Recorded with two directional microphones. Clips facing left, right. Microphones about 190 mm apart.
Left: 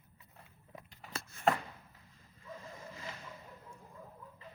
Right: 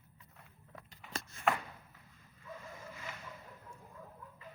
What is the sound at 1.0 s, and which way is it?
Shuffling cards, 40° left (ahead or behind).